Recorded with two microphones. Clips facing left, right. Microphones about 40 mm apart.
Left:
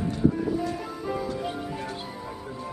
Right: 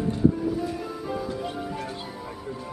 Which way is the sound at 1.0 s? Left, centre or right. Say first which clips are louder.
Left 2 dB; centre.